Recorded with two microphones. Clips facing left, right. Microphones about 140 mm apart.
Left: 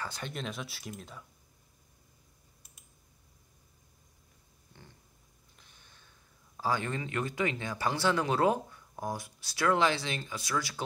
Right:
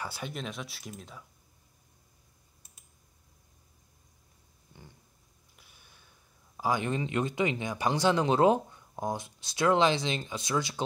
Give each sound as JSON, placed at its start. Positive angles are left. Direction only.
{"t": 0.0, "sound": "speech", "side_deg": -5}
{"t": 5.6, "sound": "speech", "side_deg": -10}